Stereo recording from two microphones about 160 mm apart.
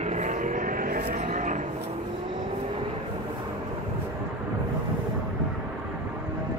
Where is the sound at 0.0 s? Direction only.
50° right (ahead or behind); by 1.2 s 65° right (ahead or behind).